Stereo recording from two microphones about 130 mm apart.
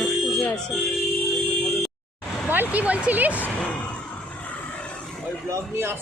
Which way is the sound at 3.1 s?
10° right (ahead or behind).